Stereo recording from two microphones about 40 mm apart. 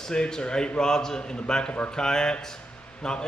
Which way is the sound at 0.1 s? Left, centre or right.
Left.